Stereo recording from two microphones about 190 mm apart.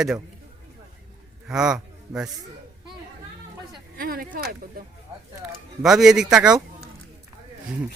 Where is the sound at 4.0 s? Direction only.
50° right (ahead or behind).